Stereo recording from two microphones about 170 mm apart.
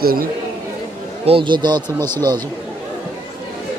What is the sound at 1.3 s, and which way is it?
Speech, 30° right (ahead or behind).